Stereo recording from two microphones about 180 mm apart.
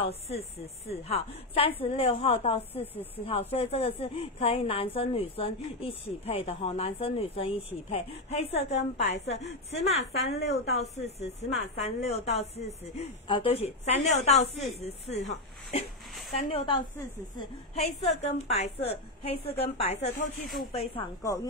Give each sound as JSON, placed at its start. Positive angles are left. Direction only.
{"t": 0.0, "sound": "speech", "side_deg": 35}
{"t": 2.8, "sound": "speech", "side_deg": 10}
{"t": 3.3, "sound": "speech", "side_deg": 30}
{"t": 9.4, "sound": "a woman's voice", "side_deg": 70}
{"t": 9.8, "sound": "speech", "side_deg": 35}
{"t": 10.3, "sound": "speech", "side_deg": 65}
{"t": 10.8, "sound": "speech", "side_deg": 35}
{"t": 21.2, "sound": "speech", "side_deg": 20}